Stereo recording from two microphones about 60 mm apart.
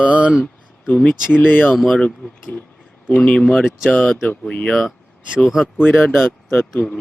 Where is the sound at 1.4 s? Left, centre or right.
Left.